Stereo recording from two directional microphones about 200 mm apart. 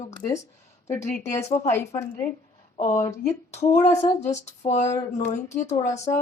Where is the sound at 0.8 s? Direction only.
15° left (ahead or behind).